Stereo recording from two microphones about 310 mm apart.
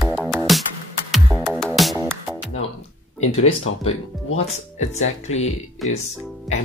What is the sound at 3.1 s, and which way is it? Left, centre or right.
Speech, left.